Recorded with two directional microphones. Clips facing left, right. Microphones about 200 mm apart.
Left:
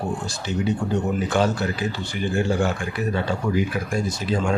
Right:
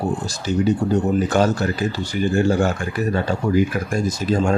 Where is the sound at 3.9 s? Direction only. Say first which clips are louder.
Right 4 dB; 45° right (ahead or behind).